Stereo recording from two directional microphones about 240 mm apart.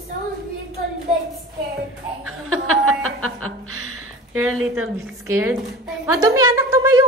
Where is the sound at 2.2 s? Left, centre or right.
Right.